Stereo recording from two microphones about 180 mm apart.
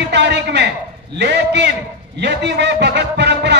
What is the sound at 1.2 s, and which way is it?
A man's voice, 75° right (ahead or behind).